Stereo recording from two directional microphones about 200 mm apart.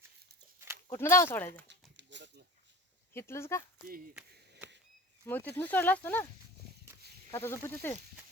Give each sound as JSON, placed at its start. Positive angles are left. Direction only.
{"t": 0.9, "sound": "speech", "side_deg": 15}
{"t": 1.6, "sound": "a sound", "side_deg": -65}
{"t": 3.1, "sound": "speech", "side_deg": 10}
{"t": 5.2, "sound": "speech", "side_deg": 10}
{"t": 7.3, "sound": "speech", "side_deg": 15}